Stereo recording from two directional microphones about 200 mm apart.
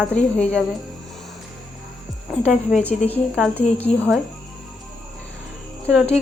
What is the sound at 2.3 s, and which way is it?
Music, 5° right (ahead or behind).